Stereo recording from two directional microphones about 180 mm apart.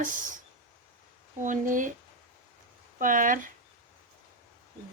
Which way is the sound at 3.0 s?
45° right (ahead or behind).